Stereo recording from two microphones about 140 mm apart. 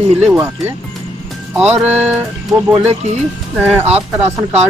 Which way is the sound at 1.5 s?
10° right (ahead or behind).